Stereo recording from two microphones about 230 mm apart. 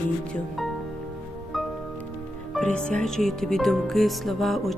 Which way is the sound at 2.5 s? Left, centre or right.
Centre.